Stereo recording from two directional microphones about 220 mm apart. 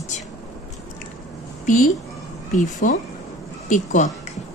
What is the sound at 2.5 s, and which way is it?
Speech, 35° left (ahead or behind).